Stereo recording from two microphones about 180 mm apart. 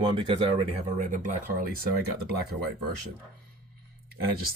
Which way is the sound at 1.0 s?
45° right (ahead or behind).